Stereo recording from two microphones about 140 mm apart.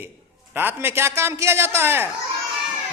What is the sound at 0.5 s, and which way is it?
A man's voice, 15° right (ahead or behind).